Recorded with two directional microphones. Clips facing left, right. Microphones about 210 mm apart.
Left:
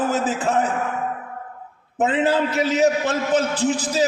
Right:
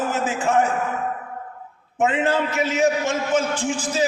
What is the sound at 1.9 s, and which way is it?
A man's voice, 35° left (ahead or behind).